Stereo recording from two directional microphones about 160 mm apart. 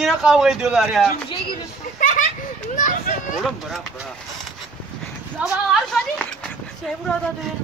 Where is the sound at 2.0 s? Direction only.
60° left (ahead or behind).